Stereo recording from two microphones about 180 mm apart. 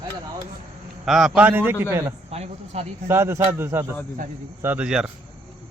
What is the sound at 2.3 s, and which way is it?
Speech, 35° right (ahead or behind).